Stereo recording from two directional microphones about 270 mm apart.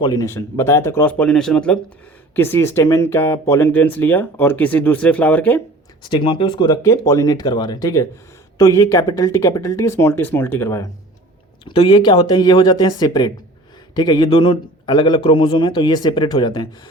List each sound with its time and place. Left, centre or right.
0.0 s speech: centre
6.0 s speech: centre